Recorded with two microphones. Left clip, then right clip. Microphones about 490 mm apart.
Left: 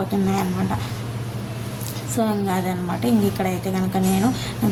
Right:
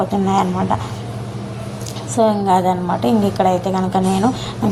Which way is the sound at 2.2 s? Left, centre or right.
Left.